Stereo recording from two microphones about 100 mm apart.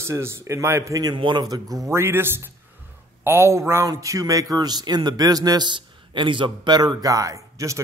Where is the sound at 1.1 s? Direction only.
50° right (ahead or behind).